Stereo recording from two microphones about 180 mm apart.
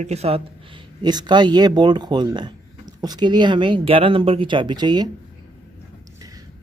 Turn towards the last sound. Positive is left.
turn(degrees=-25)  # may be behind; listen again after turning